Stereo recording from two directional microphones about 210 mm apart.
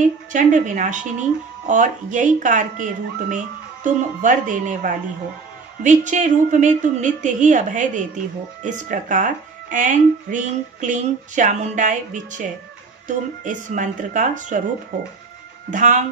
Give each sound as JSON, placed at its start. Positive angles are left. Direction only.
{"t": 0.0, "sound": "speech", "side_deg": -35}
{"t": 15.7, "sound": "speech", "side_deg": -35}